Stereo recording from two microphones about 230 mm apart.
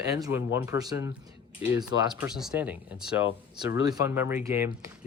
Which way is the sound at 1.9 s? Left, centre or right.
Left.